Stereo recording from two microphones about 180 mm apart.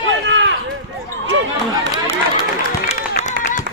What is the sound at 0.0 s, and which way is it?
Run, 90° right.